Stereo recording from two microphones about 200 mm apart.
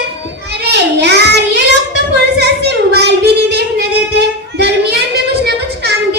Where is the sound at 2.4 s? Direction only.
55° right (ahead or behind).